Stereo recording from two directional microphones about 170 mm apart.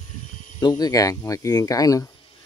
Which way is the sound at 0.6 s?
25° left (ahead or behind).